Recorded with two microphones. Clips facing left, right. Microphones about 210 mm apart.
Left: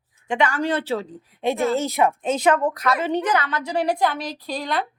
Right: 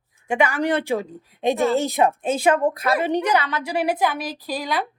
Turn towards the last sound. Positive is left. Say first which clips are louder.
# even
turn(degrees=-5)  # may be behind; listen again after turning